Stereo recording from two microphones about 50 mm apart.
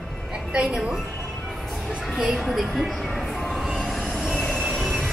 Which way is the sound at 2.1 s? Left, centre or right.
Centre.